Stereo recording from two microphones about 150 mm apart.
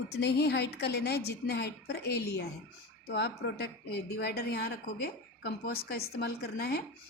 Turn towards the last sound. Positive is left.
turn(degrees=90)